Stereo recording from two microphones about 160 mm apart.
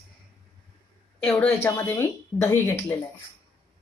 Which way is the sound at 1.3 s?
5° left (ahead or behind).